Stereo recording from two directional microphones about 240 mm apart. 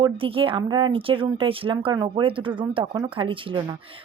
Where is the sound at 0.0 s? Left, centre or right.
Right.